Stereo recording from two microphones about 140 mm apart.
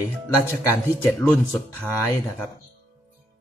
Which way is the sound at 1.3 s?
5° left (ahead or behind).